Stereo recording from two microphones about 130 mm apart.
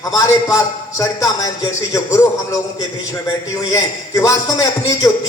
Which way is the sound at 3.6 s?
25° left (ahead or behind).